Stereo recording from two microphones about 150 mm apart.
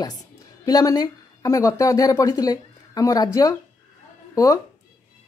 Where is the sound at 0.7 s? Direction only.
25° left (ahead or behind).